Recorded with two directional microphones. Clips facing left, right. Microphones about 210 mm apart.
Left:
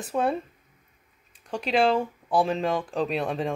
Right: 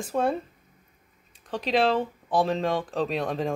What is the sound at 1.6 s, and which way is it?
Speech, 5° left (ahead or behind).